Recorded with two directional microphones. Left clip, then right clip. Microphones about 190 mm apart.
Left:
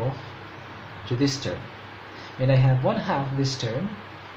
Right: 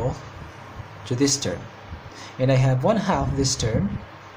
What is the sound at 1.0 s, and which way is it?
Speech, 40° right (ahead or behind).